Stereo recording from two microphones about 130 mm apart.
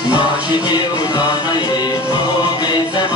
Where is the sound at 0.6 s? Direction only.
35° left (ahead or behind).